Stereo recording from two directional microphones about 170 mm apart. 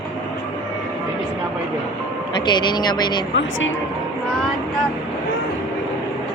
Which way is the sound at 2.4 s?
25° left (ahead or behind).